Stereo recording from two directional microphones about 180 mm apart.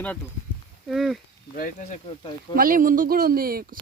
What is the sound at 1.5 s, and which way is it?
Speech, 45° left (ahead or behind).